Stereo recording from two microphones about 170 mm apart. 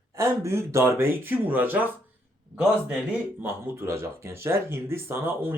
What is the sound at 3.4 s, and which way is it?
Speech, 15° right (ahead or behind).